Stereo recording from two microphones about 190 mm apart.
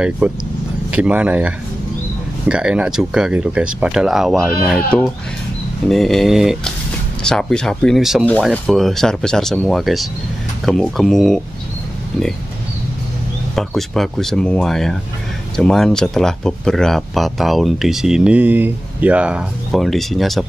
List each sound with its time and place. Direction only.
0.2 s speech: 5° right (ahead or behind)
13.6 s speech: centre (ahead or behind)